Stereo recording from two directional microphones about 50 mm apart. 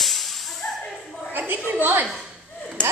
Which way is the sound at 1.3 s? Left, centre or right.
Right.